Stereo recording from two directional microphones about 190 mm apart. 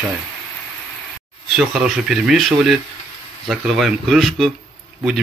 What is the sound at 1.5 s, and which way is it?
Speech, centre (ahead or behind).